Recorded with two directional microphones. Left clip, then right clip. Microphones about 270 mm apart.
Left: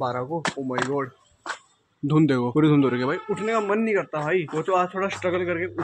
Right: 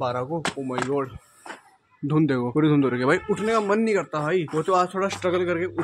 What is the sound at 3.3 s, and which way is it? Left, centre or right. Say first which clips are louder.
Speech: right 1 dB; centre.